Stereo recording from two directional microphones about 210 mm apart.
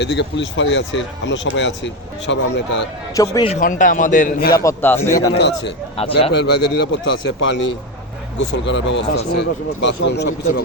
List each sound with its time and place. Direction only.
0.0 s speech: 55° left (ahead or behind)
3.2 s a man's voice: 20° left (ahead or behind)
3.5 s a man's voice: 40° left (ahead or behind)
4.5 s a man's voice: 10° left (ahead or behind)
5.4 s speech: 55° left (ahead or behind)
6.0 s a man's voice: 30° left (ahead or behind)
6.3 s speech: 55° left (ahead or behind)